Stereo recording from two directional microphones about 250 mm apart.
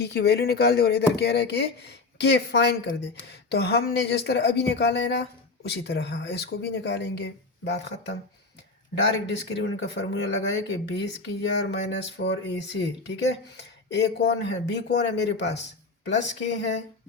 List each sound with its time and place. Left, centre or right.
0.0 s speech: left
9.2 s speech: left